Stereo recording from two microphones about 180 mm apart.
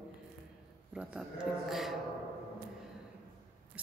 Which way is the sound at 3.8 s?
5° right (ahead or behind).